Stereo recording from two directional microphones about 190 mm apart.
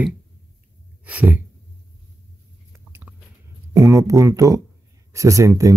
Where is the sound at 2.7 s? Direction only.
10° right (ahead or behind).